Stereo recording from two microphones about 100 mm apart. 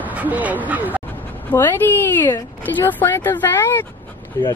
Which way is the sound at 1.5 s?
20° left (ahead or behind).